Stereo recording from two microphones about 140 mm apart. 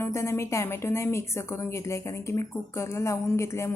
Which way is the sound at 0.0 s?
20° left (ahead or behind).